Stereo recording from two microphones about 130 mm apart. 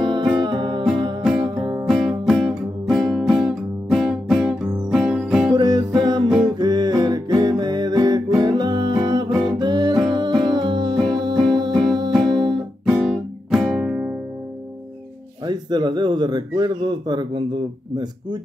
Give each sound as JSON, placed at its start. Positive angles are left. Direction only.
{"t": 0.0, "sound": "music", "side_deg": -35}
{"t": 1.9, "sound": "music", "side_deg": 0}
{"t": 5.5, "sound": "music", "side_deg": -35}
{"t": 6.2, "sound": "music", "side_deg": -5}
{"t": 6.6, "sound": "music", "side_deg": -35}
{"t": 11.7, "sound": "music", "side_deg": 0}
{"t": 15.4, "sound": "a sound", "side_deg": -35}